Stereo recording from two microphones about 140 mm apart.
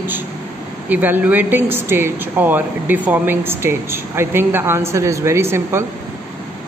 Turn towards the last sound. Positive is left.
turn(degrees=-20)  # may be behind; listen again after turning